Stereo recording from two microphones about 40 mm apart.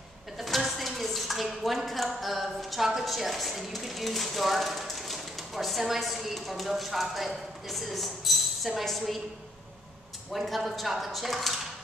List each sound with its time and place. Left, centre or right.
0.4 s speech: centre
10.3 s speech: centre